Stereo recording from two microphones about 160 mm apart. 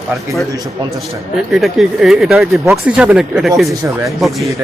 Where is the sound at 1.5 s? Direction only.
Centre (ahead or behind).